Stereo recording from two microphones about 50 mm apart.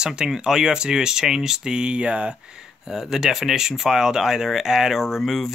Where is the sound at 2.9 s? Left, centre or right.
Centre.